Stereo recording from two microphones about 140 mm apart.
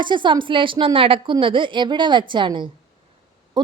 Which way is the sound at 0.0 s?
35° right (ahead or behind).